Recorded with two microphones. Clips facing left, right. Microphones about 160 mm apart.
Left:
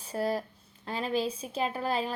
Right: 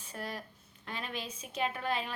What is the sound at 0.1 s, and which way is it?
A woman's voice, 35° left (ahead or behind).